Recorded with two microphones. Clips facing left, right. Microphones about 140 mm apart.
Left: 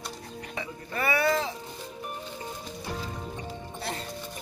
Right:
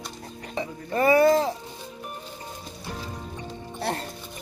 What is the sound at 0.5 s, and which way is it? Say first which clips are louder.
Music: right 8 dB; 35° right (ahead or behind).